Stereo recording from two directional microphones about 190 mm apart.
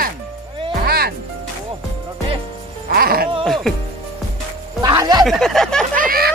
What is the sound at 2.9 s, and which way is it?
Music, 50° right (ahead or behind).